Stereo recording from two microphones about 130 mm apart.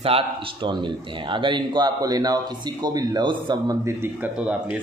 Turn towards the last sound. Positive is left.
turn(degrees=-10)  # may be behind; listen again after turning